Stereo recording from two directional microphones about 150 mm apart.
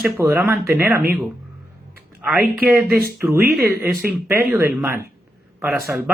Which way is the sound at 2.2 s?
5° right (ahead or behind).